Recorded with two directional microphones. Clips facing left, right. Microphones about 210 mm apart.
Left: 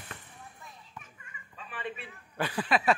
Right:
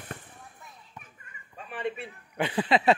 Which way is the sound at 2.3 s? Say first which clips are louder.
Right 4 dB; 25° right (ahead or behind).